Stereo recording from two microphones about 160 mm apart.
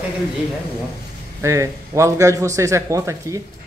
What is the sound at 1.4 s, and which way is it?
Speech, 20° right (ahead or behind).